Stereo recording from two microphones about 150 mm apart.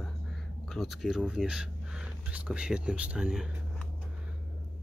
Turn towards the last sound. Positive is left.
turn(degrees=-5)  # may be behind; listen again after turning